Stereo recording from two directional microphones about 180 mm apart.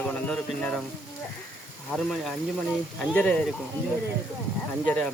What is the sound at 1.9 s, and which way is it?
Speech, 5° left (ahead or behind).